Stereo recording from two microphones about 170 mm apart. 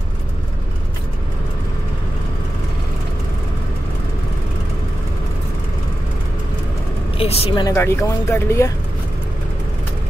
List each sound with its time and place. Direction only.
7.2 s speech: 35° left (ahead or behind)
7.6 s speech: 15° left (ahead or behind)